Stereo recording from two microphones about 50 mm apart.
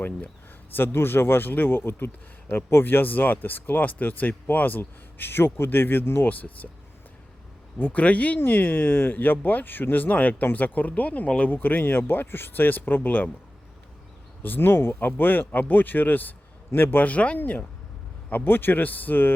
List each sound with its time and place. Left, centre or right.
0.7 s speech: left
6.2 s speech: left
7.9 s speech: left
8.4 s speech: left
14.4 s speech: left
17.1 s speech: left